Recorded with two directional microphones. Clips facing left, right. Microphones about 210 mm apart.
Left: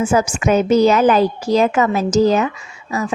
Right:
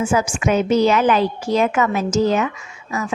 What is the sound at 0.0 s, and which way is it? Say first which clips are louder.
A woman's voice: left 3 dB; 40° left (ahead or behind).